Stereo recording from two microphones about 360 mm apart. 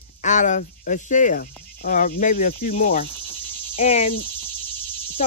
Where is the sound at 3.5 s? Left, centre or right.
Centre.